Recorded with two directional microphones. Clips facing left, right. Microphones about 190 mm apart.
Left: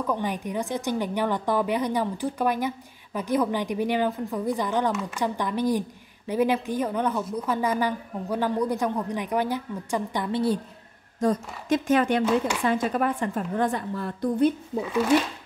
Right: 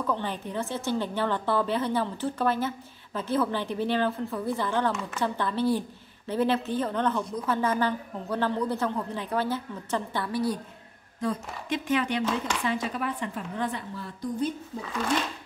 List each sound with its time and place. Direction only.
0.0 s a woman's voice: 15° left (ahead or behind)
11.1 s a woman's voice: 45° left (ahead or behind); by 14.5 s 60° left (ahead or behind)